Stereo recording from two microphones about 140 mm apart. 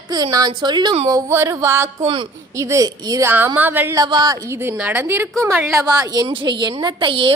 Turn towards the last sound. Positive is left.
turn(degrees=-35)  # may be behind; listen again after turning